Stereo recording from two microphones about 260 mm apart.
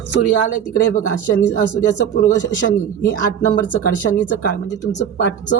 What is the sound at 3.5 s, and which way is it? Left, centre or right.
Speech, left.